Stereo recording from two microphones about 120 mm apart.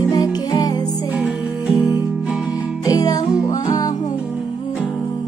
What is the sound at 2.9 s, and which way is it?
Music, 30° left (ahead or behind).